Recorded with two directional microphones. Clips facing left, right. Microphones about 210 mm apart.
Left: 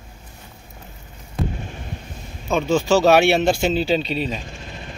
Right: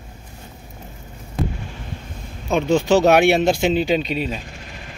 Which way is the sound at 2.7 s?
20° right (ahead or behind).